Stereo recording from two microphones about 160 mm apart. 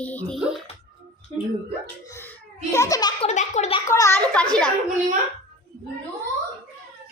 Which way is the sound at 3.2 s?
45° left (ahead or behind).